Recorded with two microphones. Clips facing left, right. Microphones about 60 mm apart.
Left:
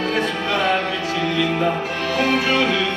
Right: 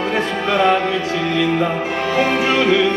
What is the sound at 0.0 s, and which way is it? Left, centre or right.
Music, right.